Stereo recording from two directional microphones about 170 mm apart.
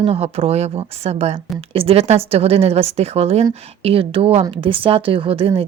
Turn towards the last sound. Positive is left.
turn(degrees=-35)  # may be behind; listen again after turning